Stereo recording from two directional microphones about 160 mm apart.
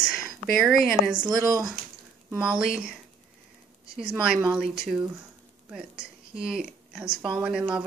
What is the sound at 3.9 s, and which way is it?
Speech, 5° right (ahead or behind).